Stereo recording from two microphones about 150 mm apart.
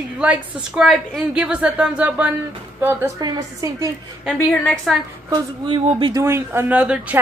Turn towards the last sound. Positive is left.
turn(degrees=-10)  # may be behind; listen again after turning